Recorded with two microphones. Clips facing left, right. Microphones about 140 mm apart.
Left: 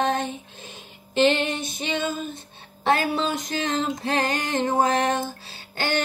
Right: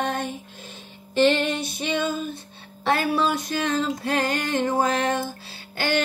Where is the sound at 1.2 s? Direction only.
20° left (ahead or behind).